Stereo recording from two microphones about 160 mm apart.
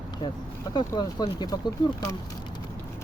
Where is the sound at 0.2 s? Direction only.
25° left (ahead or behind).